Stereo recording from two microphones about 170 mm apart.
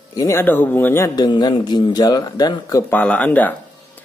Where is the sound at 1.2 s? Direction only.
25° left (ahead or behind).